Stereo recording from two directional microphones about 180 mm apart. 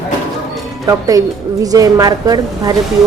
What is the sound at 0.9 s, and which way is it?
Speech, 20° right (ahead or behind).